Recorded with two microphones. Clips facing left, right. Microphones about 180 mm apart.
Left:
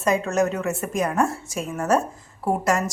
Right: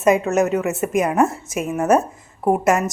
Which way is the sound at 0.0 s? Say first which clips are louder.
Right 5 dB; 20° right (ahead or behind).